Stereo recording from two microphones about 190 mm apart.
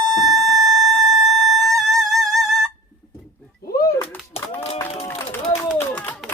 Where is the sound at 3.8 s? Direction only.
15° left (ahead or behind).